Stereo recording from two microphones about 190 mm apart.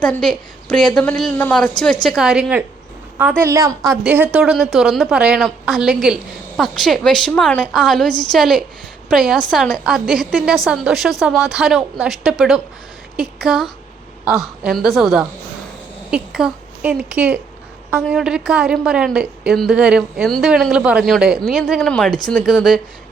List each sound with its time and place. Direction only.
0.0 s a woman's voice: 5° left (ahead or behind)
3.4 s a woman's voice: 15° right (ahead or behind); by 22.8 s centre (ahead or behind)